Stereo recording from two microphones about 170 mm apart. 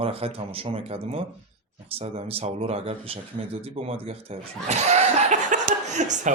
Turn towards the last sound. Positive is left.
turn(degrees=-45)  # may be behind; listen again after turning